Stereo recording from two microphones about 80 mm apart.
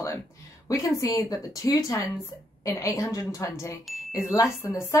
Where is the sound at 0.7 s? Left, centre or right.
Left.